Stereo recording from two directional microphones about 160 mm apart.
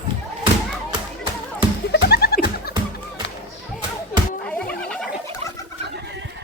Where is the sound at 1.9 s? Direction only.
85° left.